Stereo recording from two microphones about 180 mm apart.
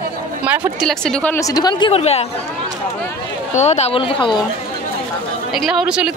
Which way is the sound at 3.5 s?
40° left (ahead or behind).